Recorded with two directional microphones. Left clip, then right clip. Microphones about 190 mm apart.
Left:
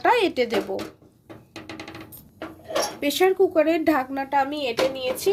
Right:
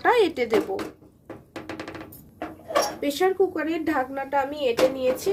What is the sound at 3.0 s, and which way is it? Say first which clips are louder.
Speech: left 3 dB; 60° left (ahead or behind).